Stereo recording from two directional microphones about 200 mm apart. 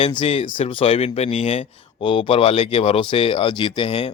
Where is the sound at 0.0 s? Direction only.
30° left (ahead or behind).